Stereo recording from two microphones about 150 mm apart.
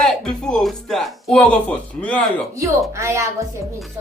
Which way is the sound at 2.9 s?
20° right (ahead or behind).